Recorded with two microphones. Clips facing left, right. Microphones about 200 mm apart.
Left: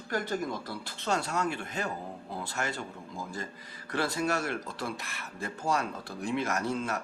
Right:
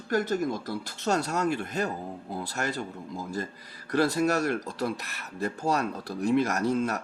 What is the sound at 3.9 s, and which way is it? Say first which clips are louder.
Speech: right 6 dB; 40° right (ahead or behind).